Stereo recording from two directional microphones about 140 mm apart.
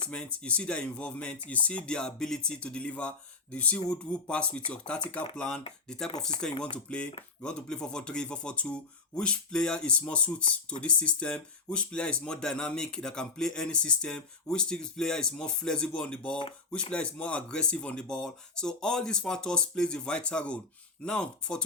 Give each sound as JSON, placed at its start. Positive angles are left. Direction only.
{"t": 0.1, "sound": "speech", "side_deg": 10}